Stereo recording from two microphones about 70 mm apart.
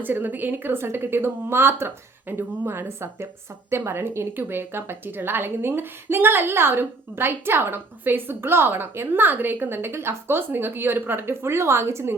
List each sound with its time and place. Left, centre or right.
0.0 s a woman's voice: right